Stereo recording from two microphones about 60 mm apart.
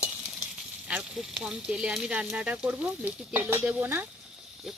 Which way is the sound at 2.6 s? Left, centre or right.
Right.